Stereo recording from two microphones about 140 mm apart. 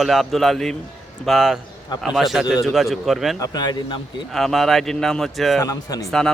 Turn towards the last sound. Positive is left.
turn(degrees=25)  # may be behind; listen again after turning